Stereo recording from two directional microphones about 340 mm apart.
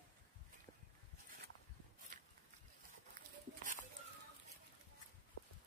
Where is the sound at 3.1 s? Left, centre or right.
Right.